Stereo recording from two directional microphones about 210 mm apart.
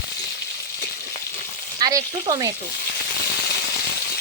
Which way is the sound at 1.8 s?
20° right (ahead or behind).